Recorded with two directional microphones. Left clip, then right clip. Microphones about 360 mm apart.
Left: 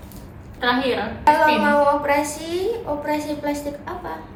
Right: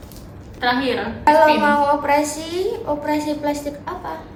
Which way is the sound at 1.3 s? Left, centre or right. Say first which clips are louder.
Right 3 dB; centre.